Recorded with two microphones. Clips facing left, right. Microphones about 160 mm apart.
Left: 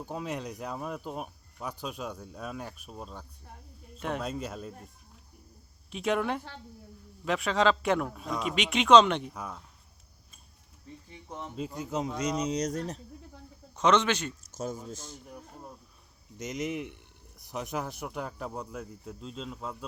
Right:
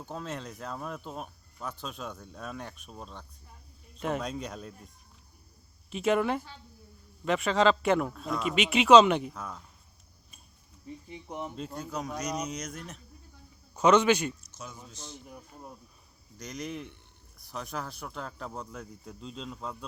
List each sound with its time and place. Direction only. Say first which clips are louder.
0.0 s a man's voice: left 3 dB; 10° left (ahead or behind)
5.9 s speech: right 2 dB; centre (ahead or behind)
9.3 s a man's voice: left 1 dB; 5° left (ahead or behind)
11.1 s speech: right 3 dB; 15° right (ahead or behind)
11.5 s a man's voice: left 2 dB; 5° left (ahead or behind)
11.8 s speech: left 4 dB; 25° left (ahead or behind)
13.7 s a man's voice: right 3 dB; 10° right (ahead or behind)
14.5 s a man's voice: left 10 dB; 45° left (ahead or behind)
16.4 s a man's voice: left 4 dB; 20° left (ahead or behind); by 19.7 s 5° left (ahead or behind)